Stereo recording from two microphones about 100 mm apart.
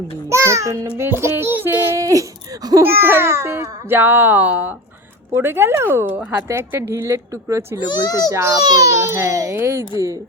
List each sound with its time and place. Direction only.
0.3 s a child's voice: 30° right (ahead or behind)
2.8 s a child's voice: 20° right (ahead or behind)